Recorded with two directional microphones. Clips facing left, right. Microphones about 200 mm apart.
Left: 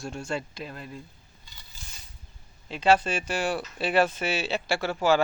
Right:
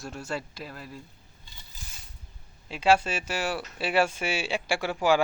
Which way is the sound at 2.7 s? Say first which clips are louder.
Left 1 dB; 10° right (ahead or behind).